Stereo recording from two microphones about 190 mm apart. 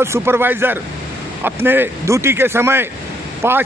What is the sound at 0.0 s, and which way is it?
A man's voice, 15° right (ahead or behind).